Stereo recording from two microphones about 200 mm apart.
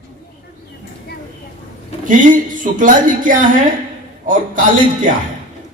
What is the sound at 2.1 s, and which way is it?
Speech, 40° right (ahead or behind).